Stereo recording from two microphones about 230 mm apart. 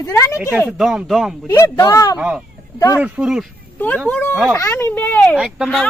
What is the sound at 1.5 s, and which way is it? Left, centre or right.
Speech, centre.